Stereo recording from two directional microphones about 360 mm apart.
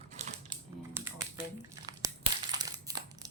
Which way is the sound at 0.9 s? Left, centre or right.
Centre.